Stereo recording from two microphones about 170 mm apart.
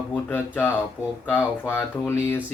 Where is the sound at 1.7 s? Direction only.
10° left (ahead or behind).